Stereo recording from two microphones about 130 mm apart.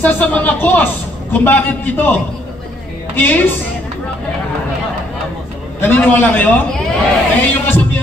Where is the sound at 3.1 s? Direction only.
15° left (ahead or behind).